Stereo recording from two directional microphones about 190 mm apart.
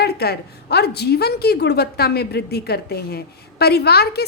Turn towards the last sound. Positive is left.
turn(degrees=55)  # may be behind; listen again after turning